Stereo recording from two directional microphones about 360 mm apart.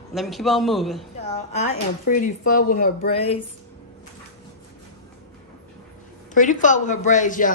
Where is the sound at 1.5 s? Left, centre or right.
Left.